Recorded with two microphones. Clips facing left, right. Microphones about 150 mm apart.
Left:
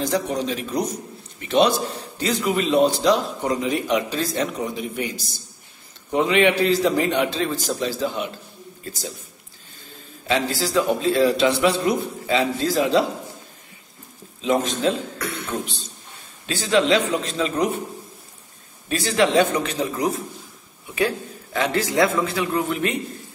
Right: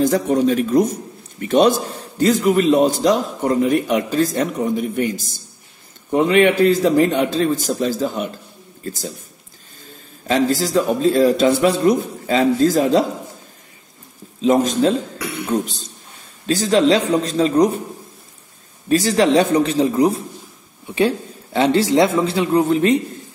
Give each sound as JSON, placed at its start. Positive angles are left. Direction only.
{"t": 0.0, "sound": "a man's voice", "side_deg": -50}
{"t": 10.2, "sound": "a man's voice", "side_deg": -40}
{"t": 14.4, "sound": "a man's voice", "side_deg": -40}
{"t": 16.4, "sound": "a man's voice", "side_deg": -40}
{"t": 18.9, "sound": "a man's voice", "side_deg": -40}